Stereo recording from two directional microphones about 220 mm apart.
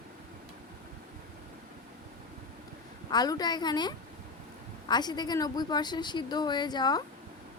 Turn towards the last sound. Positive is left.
turn(degrees=20)  # may be behind; listen again after turning